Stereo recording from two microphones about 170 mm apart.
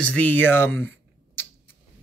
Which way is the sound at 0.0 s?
10° left (ahead or behind).